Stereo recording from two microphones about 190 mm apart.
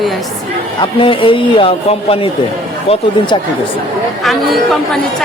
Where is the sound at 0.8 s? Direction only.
25° left (ahead or behind).